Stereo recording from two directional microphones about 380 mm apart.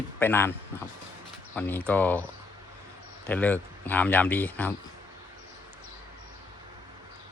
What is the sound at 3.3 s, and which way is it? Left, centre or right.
Speech, centre.